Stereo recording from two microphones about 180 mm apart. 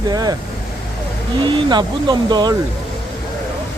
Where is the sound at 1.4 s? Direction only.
25° right (ahead or behind).